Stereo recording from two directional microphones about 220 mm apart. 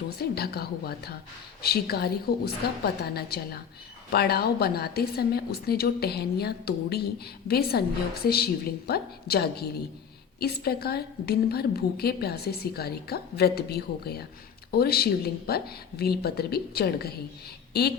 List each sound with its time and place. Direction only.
0.2 s a woman's voice: 45° left (ahead or behind)